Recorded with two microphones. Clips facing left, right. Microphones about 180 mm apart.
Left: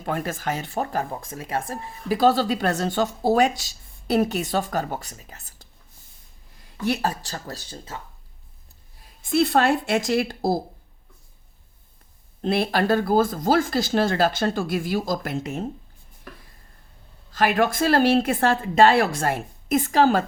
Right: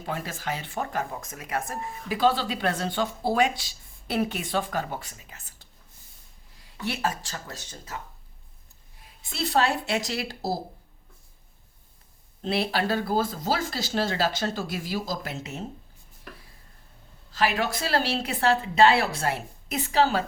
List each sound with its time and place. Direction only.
0.0 s speech: 50° left (ahead or behind)
6.8 s speech: 40° left (ahead or behind)
9.3 s speech: 55° left (ahead or behind)
12.4 s speech: 50° left (ahead or behind)
17.3 s speech: 50° left (ahead or behind)